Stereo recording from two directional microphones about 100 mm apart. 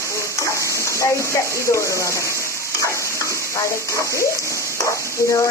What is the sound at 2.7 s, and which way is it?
Stir, 30° left (ahead or behind).